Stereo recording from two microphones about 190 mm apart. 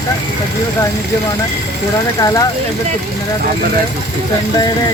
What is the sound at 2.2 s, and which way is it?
Speech, 20° left (ahead or behind).